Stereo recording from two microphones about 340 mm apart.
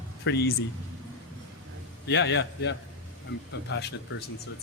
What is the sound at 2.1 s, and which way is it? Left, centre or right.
Speech, left.